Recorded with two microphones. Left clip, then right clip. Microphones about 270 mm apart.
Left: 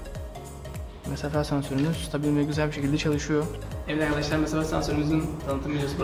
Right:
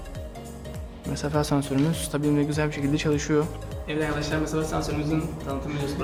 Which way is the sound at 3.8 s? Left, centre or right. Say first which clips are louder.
Left 1 dB; centre.